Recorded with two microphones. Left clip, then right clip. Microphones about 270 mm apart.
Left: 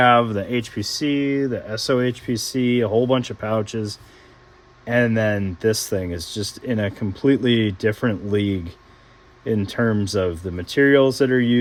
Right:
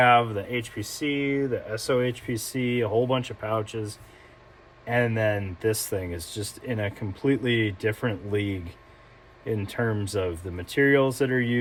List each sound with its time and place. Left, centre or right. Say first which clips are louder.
0.0 s speech: left 4 dB; left